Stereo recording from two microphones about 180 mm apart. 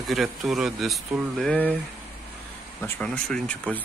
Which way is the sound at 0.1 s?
Centre (ahead or behind).